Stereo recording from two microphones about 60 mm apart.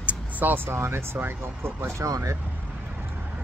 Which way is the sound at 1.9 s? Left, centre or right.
Right.